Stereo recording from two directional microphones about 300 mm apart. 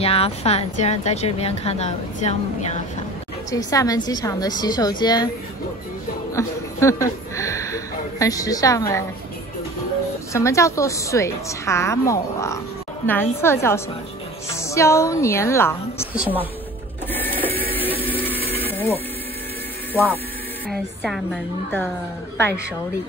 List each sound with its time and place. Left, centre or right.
0.0 s speech: centre
3.5 s a woman's voice: centre
6.3 s speech: centre
10.3 s a woman's voice: centre
16.1 s a woman's voice: centre
17.1 s printer: centre
18.0 s music: centre
18.6 s a sound: centre
20.6 s a woman's voice: centre